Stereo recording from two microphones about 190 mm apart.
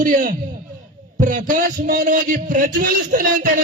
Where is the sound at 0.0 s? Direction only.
45° right (ahead or behind).